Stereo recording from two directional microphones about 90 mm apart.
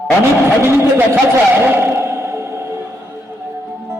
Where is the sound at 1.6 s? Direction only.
25° right (ahead or behind).